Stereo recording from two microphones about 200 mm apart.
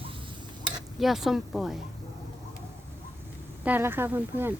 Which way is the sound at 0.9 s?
Centre (ahead or behind).